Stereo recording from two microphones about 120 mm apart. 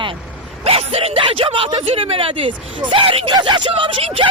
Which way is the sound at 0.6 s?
55° right (ahead or behind).